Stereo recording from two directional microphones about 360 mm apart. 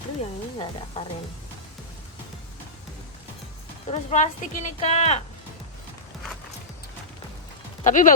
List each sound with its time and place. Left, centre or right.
0.2 s speech: centre
3.8 s speech: centre
7.9 s speech: left